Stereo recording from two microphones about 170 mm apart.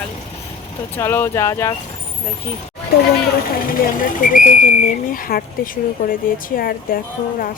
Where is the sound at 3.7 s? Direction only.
55° left (ahead or behind).